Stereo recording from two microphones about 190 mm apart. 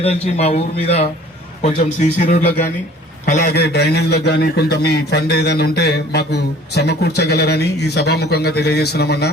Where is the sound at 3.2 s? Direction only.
50° left (ahead or behind).